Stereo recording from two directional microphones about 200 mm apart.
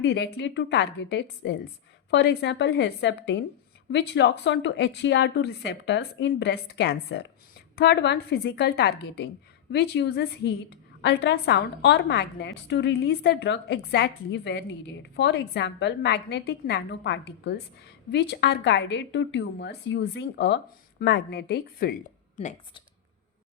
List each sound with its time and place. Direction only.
0.0 s a woman's voice: 60° left (ahead or behind)
22.4 s speech: 30° left (ahead or behind)